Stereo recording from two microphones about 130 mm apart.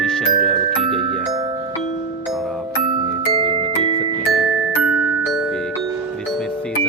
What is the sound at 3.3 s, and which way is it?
Music, 45° right (ahead or behind).